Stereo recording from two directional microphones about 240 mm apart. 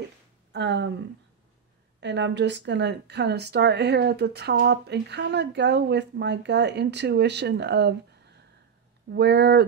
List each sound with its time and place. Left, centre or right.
0.5 s speech: right
2.0 s speech: right
9.1 s speech: right